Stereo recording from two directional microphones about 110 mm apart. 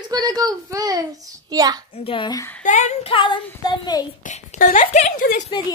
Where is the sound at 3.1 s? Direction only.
45° left (ahead or behind).